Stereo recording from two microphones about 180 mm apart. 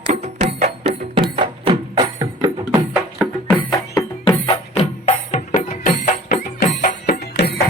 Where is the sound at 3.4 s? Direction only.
25° left (ahead or behind).